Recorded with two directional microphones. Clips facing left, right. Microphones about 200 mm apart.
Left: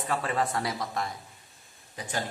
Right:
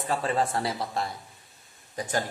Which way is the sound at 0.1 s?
30° right (ahead or behind).